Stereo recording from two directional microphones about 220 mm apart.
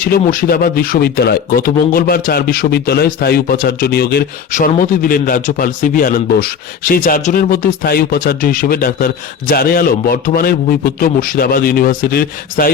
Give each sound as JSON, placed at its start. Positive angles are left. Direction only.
{"t": 0.0, "sound": "a man's voice", "side_deg": 40}